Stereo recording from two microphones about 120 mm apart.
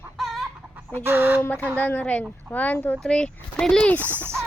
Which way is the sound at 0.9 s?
15° right (ahead or behind).